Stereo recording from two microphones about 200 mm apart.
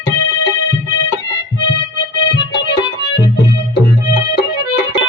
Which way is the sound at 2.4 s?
60° left (ahead or behind).